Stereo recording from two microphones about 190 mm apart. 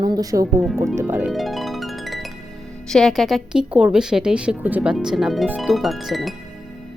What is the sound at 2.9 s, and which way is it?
Speech, centre (ahead or behind).